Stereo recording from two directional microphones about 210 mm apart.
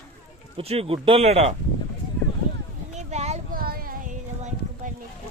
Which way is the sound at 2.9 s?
30° right (ahead or behind).